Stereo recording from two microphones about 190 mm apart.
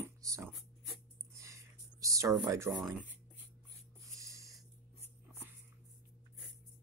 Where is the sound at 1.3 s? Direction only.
15° right (ahead or behind).